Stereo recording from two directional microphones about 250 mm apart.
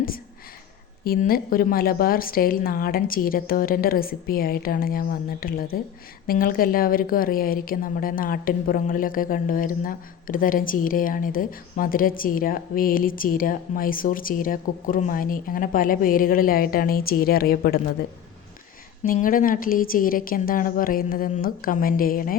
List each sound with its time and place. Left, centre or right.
1.0 s a woman's voice: left
19.0 s a woman's voice: left